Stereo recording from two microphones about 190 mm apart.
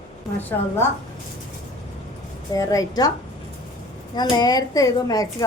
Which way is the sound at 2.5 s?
15° left (ahead or behind).